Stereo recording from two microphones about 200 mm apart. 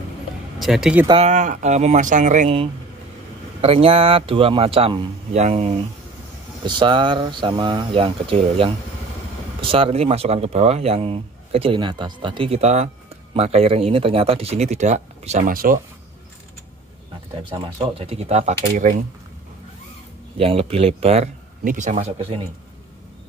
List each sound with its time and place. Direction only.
0.6 s speech: centre (ahead or behind)
1.0 s speech: 30° right (ahead or behind); by 15.8 s 45° right (ahead or behind)
17.4 s speech: 25° right (ahead or behind)
18.8 s speech: 40° right (ahead or behind)
20.3 s speech: 30° right (ahead or behind)